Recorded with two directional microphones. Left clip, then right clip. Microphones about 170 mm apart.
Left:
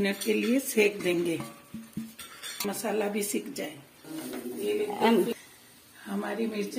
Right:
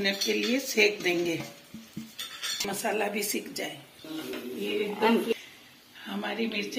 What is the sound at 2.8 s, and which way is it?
Speech, 70° left (ahead or behind).